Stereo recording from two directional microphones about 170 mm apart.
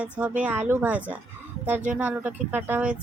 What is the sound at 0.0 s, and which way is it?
Speech, 10° right (ahead or behind).